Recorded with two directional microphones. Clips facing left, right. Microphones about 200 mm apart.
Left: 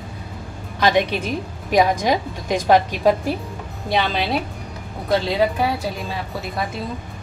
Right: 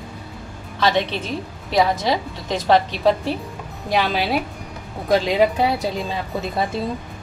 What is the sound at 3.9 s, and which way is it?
Speech, centre (ahead or behind).